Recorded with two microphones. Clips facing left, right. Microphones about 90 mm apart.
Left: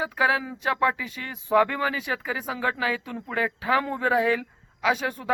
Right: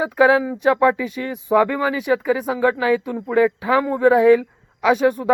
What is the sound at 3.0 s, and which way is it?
A man's voice, 15° right (ahead or behind).